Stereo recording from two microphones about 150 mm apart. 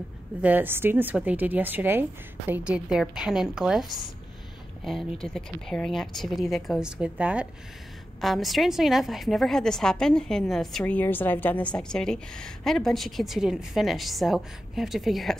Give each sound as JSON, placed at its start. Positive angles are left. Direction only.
{"t": 0.4, "sound": "a woman's voice", "side_deg": -10}
{"t": 5.2, "sound": "a woman's voice", "side_deg": 5}